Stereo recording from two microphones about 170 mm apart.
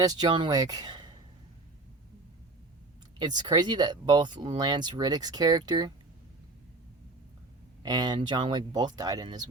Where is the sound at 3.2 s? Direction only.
25° right (ahead or behind).